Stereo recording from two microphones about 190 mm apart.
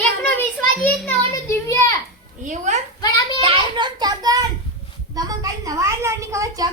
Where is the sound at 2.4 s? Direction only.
40° right (ahead or behind).